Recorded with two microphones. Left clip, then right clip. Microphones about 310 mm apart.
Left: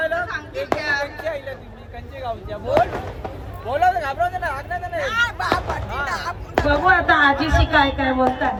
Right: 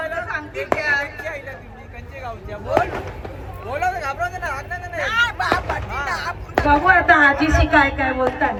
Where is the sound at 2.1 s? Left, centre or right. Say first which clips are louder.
Left 3 dB; left.